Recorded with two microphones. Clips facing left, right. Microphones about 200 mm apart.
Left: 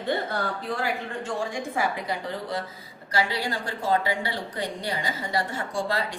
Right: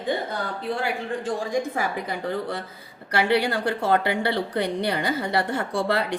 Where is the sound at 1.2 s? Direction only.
40° right (ahead or behind).